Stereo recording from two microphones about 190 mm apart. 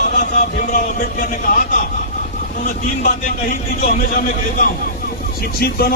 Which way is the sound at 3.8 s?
40° left (ahead or behind).